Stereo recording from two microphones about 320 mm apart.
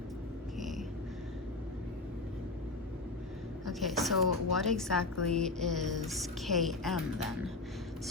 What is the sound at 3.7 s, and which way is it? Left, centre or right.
A woman's voice, centre.